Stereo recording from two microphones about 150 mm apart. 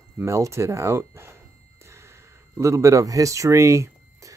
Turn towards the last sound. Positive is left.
turn(degrees=-20)  # may be behind; listen again after turning